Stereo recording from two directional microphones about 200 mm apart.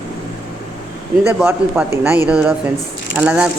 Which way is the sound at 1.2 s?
10° right (ahead or behind).